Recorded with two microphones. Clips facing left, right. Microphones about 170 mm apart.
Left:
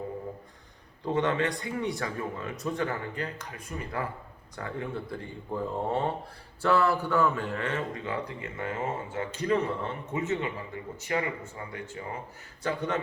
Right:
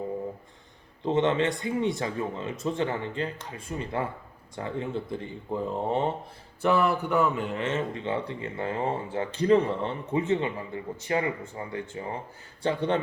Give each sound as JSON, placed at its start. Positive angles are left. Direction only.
{"t": 1.0, "sound": "a man's voice", "side_deg": -25}